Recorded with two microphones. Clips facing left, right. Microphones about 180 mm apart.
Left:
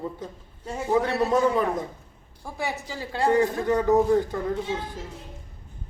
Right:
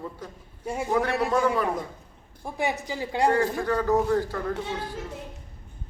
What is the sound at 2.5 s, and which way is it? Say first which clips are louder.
Speech: right 3 dB; 20° right (ahead or behind).